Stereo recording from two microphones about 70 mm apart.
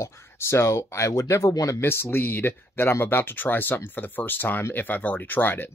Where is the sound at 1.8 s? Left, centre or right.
Left.